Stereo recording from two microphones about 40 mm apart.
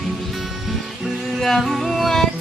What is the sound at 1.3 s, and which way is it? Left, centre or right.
Music, centre.